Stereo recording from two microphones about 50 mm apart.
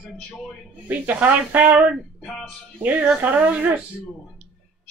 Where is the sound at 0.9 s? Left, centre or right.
Right.